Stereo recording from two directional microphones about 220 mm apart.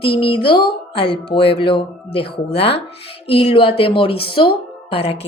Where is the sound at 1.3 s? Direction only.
25° left (ahead or behind).